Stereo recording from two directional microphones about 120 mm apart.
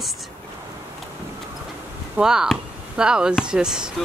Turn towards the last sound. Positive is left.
turn(degrees=-5)  # may be behind; listen again after turning